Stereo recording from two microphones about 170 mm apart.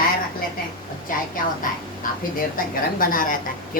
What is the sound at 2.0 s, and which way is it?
A woman's voice, 55° left (ahead or behind).